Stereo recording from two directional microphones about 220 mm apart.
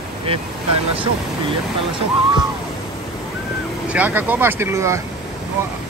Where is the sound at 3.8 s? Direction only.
5° right (ahead or behind).